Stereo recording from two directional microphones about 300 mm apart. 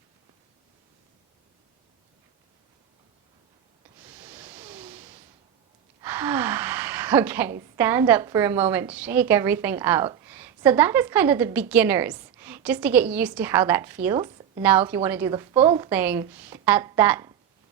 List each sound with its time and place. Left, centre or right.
4.1 s a sound: centre
6.0 s a woman's voice: centre
14.6 s a woman's voice: centre